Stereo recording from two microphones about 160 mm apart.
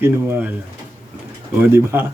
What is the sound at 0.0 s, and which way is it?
Speech, 15° right (ahead or behind).